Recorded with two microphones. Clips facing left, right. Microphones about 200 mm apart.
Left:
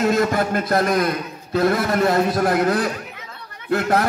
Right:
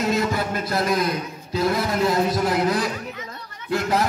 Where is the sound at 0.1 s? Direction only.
50° left (ahead or behind).